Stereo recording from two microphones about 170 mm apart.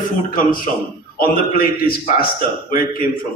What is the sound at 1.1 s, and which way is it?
A man's voice, 60° left (ahead or behind).